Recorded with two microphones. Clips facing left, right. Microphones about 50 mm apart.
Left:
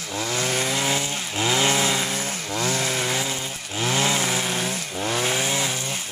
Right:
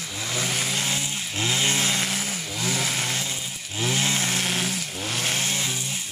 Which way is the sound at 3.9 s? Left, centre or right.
Left.